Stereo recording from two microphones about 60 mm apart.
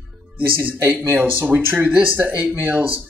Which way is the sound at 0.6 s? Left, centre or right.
Right.